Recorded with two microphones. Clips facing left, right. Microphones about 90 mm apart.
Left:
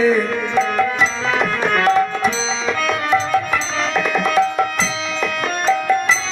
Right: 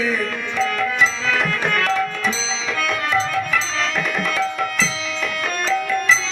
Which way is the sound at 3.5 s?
35° left (ahead or behind).